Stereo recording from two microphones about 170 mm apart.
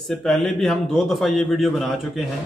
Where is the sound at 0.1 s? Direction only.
5° left (ahead or behind).